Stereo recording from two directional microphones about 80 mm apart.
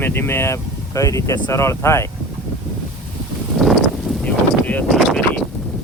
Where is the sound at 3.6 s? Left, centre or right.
Centre.